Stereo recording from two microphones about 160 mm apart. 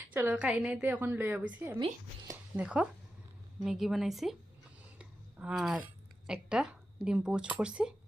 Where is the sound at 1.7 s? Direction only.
25° right (ahead or behind).